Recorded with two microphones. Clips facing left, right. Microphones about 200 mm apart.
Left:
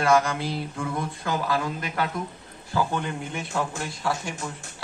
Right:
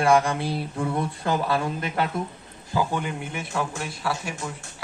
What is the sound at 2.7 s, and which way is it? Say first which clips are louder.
A man's voice: right 1 dB; 10° right (ahead or behind).